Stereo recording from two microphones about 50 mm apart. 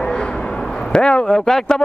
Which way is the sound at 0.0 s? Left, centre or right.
Centre.